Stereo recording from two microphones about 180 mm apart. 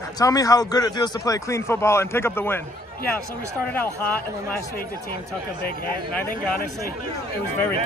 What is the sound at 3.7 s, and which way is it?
Speech, 10° left (ahead or behind).